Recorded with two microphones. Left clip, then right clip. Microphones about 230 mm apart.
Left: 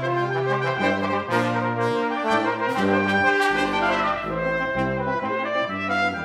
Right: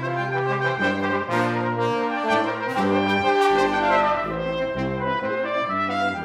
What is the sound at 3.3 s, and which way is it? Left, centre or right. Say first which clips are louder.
Brass instrument: right 2 dB; right.